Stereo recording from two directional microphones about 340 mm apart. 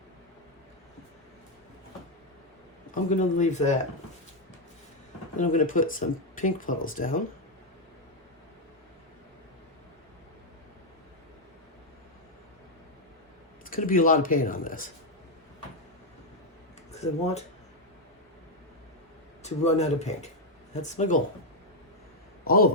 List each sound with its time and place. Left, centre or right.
2.9 s speech: left
5.4 s speech: left
13.7 s speech: left
16.9 s speech: centre
19.4 s speech: centre
22.4 s a man's voice: left